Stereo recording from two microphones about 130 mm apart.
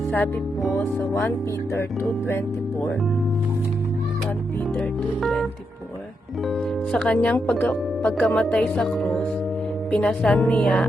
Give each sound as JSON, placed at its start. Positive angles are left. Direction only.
{"t": 0.8, "sound": "speech", "side_deg": 20}
{"t": 4.8, "sound": "speech", "side_deg": 0}
{"t": 6.5, "sound": "speech", "side_deg": 5}